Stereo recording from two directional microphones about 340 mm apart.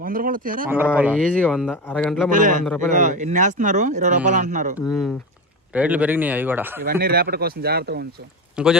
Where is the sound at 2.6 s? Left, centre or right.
Centre.